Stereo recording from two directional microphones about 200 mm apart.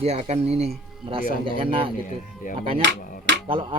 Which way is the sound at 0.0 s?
30° right (ahead or behind).